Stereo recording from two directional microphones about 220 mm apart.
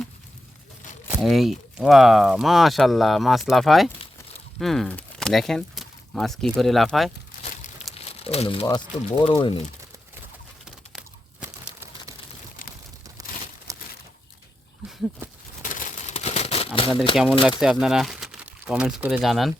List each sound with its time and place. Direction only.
1.2 s speech: centre (ahead or behind)
7.9 s crumpling: 25° left (ahead or behind)
9.2 s speech: 20° left (ahead or behind)
10.9 s crumpling: 5° right (ahead or behind)
13.2 s crumpling: 15° right (ahead or behind)
15.2 s a sound: 10° right (ahead or behind)
15.7 s crumpling: 35° left (ahead or behind)
17.6 s speech: centre (ahead or behind)